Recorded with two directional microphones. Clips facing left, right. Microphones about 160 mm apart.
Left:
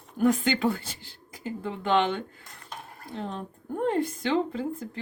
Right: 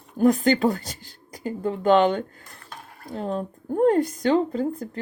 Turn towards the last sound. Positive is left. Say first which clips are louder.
# right 4 dB
turn(degrees=-40)  # may be behind; listen again after turning